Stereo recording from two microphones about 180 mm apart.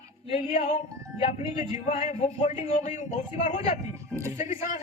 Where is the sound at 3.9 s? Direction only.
15° right (ahead or behind).